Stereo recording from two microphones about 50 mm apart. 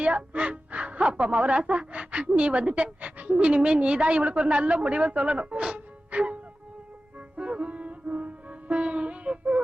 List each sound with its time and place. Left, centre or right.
0.0 s speech: right
7.3 s music: right